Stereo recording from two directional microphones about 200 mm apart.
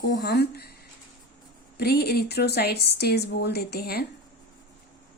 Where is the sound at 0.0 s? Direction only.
55° left (ahead or behind).